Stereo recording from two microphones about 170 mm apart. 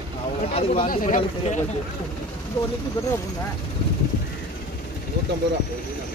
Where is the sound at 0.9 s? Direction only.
50° left (ahead or behind).